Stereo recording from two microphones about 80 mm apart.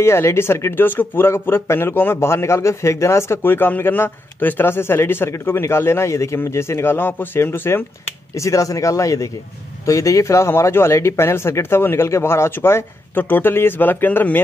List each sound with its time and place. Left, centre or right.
0.0 s a man's voice: left
8.4 s a man's voice: left